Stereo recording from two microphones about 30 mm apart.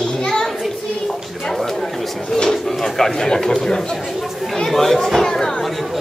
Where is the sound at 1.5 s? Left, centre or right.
Centre.